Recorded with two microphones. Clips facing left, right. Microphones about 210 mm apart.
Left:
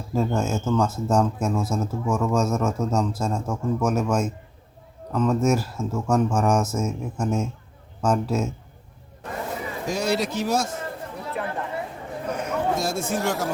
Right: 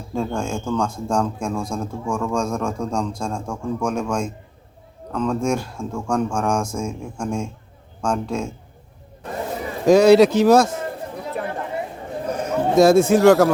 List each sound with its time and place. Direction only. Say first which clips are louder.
0.1 s speech: left 1 dB; 5° left (ahead or behind)
9.8 s speech: right 14 dB; 75° right (ahead or behind)
12.2 s a sound: right 3 dB; 40° right (ahead or behind)
12.7 s speech: right 13 dB; 75° right (ahead or behind)